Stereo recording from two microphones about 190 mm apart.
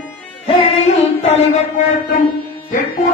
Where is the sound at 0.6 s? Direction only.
35° left (ahead or behind).